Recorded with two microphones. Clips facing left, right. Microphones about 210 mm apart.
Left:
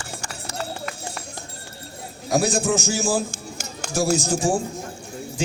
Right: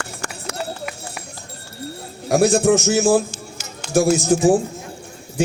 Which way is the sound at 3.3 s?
50° left (ahead or behind).